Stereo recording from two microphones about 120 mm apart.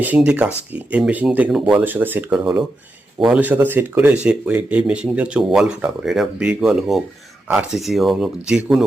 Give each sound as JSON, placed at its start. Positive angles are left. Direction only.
{"t": 0.0, "sound": "speech", "side_deg": -10}
{"t": 3.4, "sound": "speech", "side_deg": -15}